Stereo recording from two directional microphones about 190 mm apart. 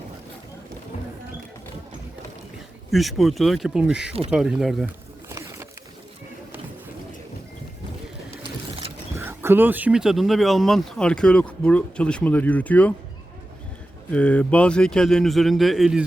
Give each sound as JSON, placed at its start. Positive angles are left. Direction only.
{"t": 2.9, "sound": "speech", "side_deg": 0}
{"t": 5.3, "sound": "a sound", "side_deg": -15}
{"t": 9.1, "sound": "speech", "side_deg": -15}
{"t": 14.1, "sound": "speech", "side_deg": 5}